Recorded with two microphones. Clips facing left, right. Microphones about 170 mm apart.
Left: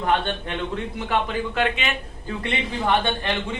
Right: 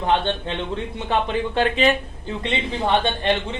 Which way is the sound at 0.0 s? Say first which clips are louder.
Right 2 dB; 25° right (ahead or behind).